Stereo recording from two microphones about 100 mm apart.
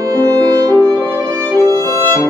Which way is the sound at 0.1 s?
35° right (ahead or behind).